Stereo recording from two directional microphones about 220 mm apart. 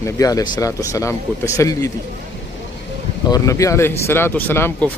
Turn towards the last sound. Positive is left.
turn(degrees=10)  # may be behind; listen again after turning